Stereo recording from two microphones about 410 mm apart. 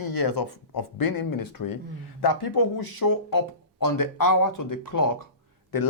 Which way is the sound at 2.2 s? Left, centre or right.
Left.